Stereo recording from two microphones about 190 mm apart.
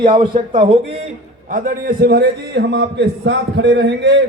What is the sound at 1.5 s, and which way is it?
A man's voice, 50° right (ahead or behind).